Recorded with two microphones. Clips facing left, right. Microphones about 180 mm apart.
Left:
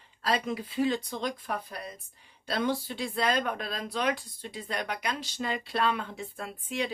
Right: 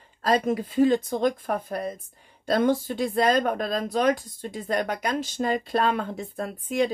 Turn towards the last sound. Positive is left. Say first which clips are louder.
# right 8 dB
turn(degrees=-45)  # may be behind; listen again after turning